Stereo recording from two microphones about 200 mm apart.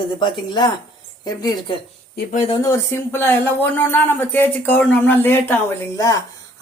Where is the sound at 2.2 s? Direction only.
45° left (ahead or behind).